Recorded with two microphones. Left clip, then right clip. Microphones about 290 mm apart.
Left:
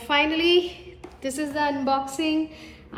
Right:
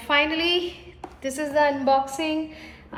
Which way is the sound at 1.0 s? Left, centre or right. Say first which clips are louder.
Right 1 dB; centre.